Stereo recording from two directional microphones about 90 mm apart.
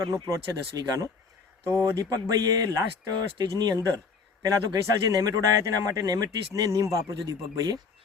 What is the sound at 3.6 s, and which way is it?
Speech, 45° right (ahead or behind).